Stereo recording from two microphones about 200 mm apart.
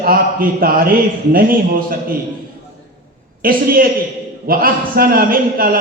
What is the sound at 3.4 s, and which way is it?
A man's voice, 45° right (ahead or behind).